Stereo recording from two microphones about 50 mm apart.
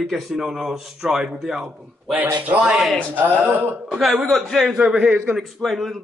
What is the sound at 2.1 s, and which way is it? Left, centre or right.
Speech, right.